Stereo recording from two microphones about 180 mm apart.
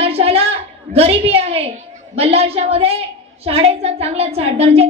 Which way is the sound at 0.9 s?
35° right (ahead or behind).